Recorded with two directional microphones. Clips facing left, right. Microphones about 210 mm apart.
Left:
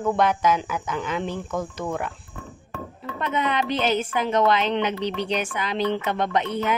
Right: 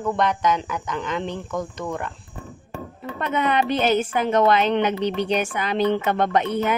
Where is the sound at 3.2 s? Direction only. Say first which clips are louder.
Right 3 dB; 50° right (ahead or behind).